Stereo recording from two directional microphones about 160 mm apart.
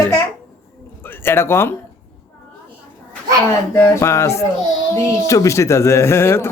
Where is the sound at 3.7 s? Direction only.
15° left (ahead or behind).